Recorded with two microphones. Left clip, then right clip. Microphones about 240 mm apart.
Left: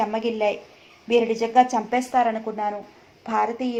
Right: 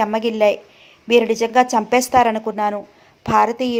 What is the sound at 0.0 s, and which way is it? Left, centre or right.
A woman's voice, right.